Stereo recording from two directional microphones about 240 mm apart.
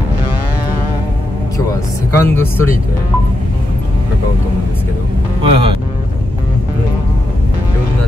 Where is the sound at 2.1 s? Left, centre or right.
Centre.